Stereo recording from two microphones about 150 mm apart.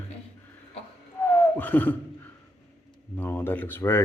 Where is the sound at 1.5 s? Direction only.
10° left (ahead or behind).